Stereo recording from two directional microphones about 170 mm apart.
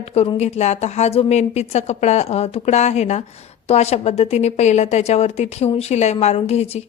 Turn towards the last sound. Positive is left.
turn(degrees=40)  # may be behind; listen again after turning